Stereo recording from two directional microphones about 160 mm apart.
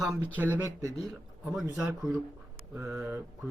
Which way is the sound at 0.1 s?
10° right (ahead or behind).